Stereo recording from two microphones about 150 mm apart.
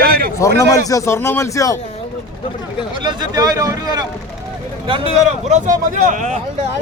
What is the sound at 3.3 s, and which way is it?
Speech, 25° right (ahead or behind).